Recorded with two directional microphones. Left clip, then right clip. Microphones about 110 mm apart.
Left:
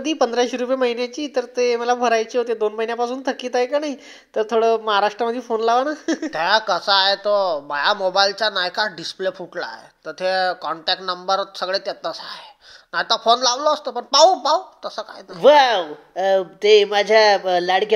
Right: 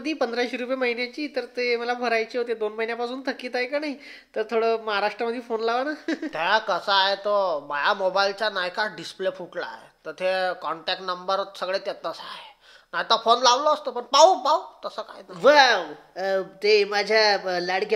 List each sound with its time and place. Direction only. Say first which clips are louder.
0.0 s speech: left 7 dB; 40° left (ahead or behind)
15.4 s speech: left 4 dB; 25° left (ahead or behind)